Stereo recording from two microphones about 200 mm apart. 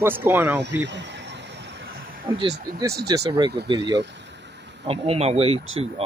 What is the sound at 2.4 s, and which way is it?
Speech, 50° right (ahead or behind).